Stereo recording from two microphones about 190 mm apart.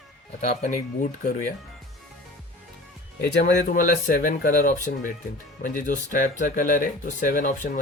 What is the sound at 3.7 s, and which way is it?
Speech, 45° left (ahead or behind).